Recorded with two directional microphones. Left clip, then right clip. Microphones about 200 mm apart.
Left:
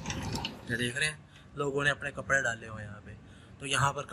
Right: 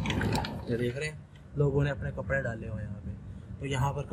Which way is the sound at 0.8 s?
Centre (ahead or behind).